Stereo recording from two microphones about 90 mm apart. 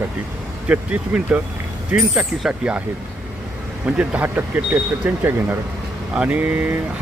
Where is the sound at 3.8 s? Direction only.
15° right (ahead or behind).